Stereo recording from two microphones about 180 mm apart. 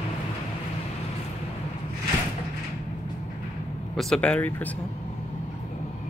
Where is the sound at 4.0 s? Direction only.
5° left (ahead or behind).